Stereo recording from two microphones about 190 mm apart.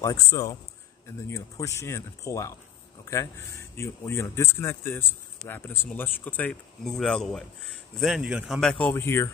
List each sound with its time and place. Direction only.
0.0 s speech: 15° left (ahead or behind)
3.7 s speech: 15° left (ahead or behind)